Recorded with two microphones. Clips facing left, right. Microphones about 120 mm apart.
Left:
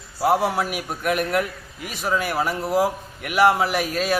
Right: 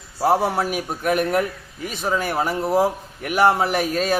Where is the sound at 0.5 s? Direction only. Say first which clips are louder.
Right 2 dB; 35° right (ahead or behind).